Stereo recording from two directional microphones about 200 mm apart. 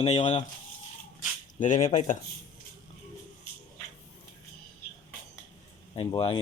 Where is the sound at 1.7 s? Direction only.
35° left (ahead or behind).